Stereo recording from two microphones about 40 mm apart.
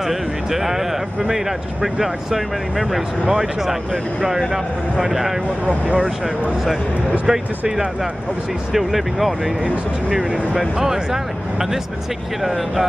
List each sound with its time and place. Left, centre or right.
0.0 s speech: centre
5.7 s speech: right
7.2 s speech: centre
10.8 s speech: centre